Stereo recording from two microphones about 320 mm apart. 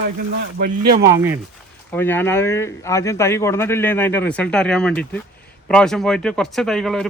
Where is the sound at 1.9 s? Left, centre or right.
Centre.